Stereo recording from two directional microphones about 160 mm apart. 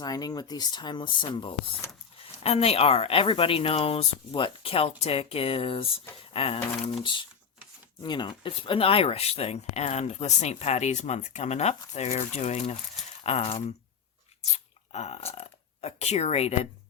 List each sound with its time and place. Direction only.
0.0 s speech: 25° left (ahead or behind); by 16.6 s 40° left (ahead or behind)